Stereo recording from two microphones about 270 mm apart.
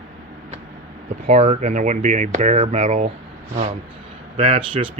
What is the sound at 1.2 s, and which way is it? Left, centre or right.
Speech, right.